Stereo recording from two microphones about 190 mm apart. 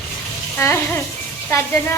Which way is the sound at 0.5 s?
10° left (ahead or behind).